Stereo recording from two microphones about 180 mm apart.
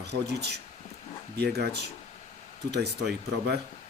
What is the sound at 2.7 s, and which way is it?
Speech, 65° right (ahead or behind).